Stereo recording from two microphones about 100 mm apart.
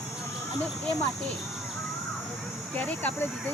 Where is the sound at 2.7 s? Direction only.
15° left (ahead or behind).